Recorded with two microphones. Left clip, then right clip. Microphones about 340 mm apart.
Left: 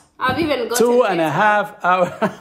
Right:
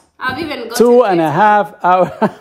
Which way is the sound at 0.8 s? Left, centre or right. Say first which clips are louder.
Right 7 dB; right.